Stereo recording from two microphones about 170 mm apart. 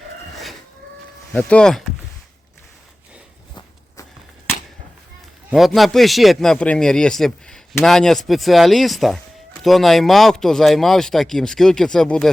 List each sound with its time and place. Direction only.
1.3 s speech: 5° left (ahead or behind)
5.5 s speech: centre (ahead or behind)